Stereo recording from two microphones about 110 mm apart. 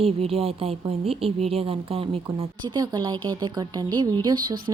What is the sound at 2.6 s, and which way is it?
A woman's voice, 40° right (ahead or behind).